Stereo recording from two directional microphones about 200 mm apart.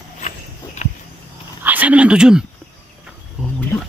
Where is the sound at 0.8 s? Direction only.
35° left (ahead or behind).